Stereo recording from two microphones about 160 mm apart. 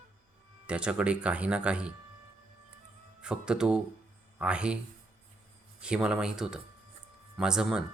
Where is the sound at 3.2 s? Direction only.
5° right (ahead or behind).